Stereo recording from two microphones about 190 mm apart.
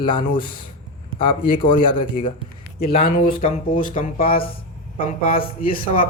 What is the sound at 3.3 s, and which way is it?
A man's voice, 45° left (ahead or behind).